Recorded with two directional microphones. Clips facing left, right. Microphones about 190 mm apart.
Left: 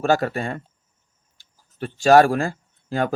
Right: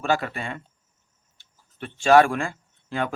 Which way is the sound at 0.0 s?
40° left (ahead or behind).